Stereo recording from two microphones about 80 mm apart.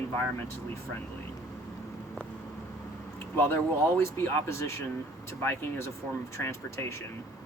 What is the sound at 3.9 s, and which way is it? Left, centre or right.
Speech, left.